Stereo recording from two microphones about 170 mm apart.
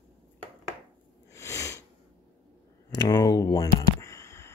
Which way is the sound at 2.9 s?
20° left (ahead or behind).